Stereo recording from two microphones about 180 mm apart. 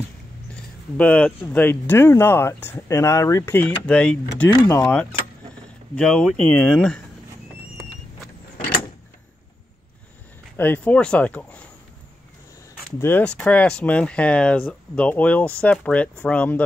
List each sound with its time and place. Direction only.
0.9 s speech: 5° left (ahead or behind)
4.5 s speech: 20° left (ahead or behind)
5.9 s speech: 5° left (ahead or behind)
10.6 s speech: 10° left (ahead or behind)
13.0 s speech: 10° left (ahead or behind)